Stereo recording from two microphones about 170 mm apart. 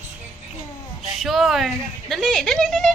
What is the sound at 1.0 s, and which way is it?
Speech, centre (ahead or behind).